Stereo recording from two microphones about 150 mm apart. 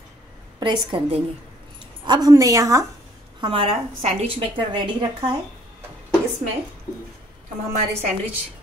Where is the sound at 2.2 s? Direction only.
25° right (ahead or behind).